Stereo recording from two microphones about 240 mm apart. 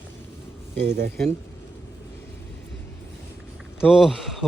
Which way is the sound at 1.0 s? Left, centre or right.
Right.